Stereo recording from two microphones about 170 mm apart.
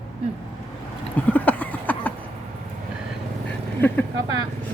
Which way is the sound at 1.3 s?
10° left (ahead or behind).